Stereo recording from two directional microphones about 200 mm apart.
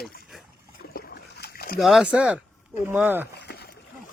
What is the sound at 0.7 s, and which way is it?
Boat, 50° left (ahead or behind).